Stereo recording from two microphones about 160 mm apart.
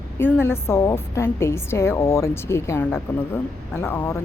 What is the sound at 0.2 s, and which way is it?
A woman's voice, 15° left (ahead or behind).